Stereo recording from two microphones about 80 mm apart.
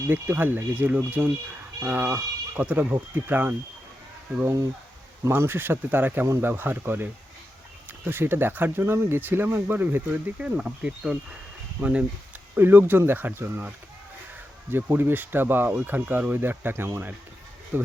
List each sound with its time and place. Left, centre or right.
0.1 s speech: right
4.4 s speech: right
5.3 s speech: right
10.3 s speech: centre
12.5 s speech: right